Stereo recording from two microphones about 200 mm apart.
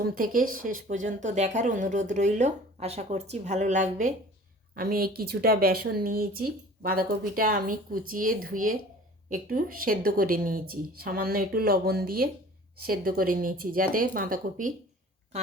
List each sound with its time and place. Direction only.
0.0 s speech: 45° right (ahead or behind)